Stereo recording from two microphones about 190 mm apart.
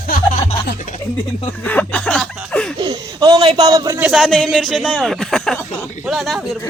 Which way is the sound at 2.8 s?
20° right (ahead or behind).